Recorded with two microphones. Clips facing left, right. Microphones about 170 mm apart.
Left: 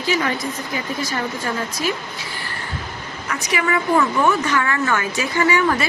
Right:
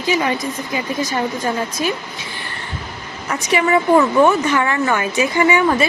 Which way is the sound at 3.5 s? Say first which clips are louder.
Right 5 dB; 25° right (ahead or behind).